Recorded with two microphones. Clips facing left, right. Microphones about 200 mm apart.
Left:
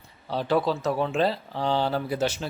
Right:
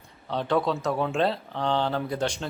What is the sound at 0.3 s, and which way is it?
Speech, 5° left (ahead or behind).